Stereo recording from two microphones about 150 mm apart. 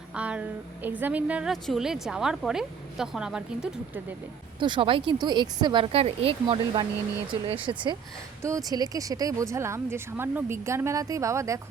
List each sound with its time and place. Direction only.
0.1 s a woman's voice: 10° right (ahead or behind)
4.6 s speech: 35° right (ahead or behind)
8.4 s speech: 20° right (ahead or behind)